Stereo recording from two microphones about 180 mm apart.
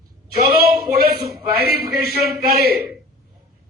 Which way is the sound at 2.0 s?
60° right (ahead or behind).